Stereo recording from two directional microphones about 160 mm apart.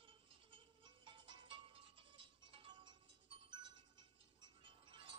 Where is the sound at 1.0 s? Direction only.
30° right (ahead or behind).